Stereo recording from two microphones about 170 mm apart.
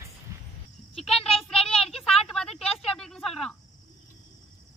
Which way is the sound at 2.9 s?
5° left (ahead or behind).